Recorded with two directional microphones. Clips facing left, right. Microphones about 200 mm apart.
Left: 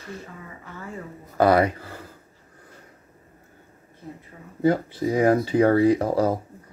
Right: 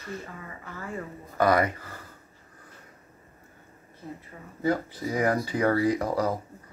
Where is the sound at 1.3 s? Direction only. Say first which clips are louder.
Left 5 dB; 30° left (ahead or behind).